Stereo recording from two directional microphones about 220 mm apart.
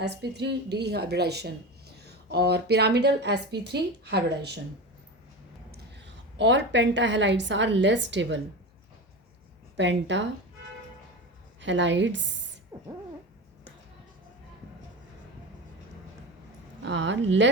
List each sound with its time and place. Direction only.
0.0 s a woman's voice: 50° right (ahead or behind)
5.7 s a sound: 50° right (ahead or behind)
6.7 s a woman's voice: 55° right (ahead or behind)
9.7 s a woman's voice: 55° right (ahead or behind)
11.6 s a woman's voice: 55° right (ahead or behind)
12.7 s owl: 20° right (ahead or behind)
16.8 s a woman's voice: 55° right (ahead or behind)